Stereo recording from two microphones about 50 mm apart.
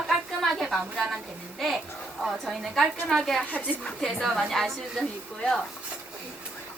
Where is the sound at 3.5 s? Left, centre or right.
Left.